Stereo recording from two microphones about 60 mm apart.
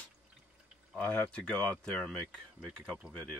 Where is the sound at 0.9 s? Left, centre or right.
Left.